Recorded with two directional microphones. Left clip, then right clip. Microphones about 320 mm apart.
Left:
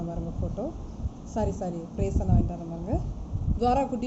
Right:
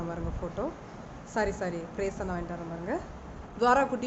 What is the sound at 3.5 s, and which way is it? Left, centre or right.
Speech, centre.